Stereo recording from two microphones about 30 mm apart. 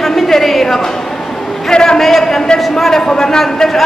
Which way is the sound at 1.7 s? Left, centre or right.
Left.